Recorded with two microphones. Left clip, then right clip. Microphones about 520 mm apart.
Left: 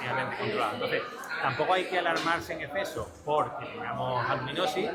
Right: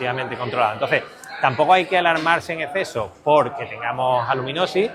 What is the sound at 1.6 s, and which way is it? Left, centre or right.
Speech, right.